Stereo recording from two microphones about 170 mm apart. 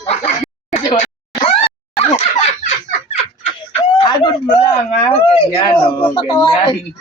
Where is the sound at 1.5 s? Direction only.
35° left (ahead or behind).